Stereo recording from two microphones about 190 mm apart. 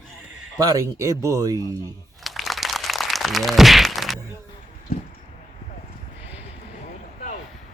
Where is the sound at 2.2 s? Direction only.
Centre (ahead or behind).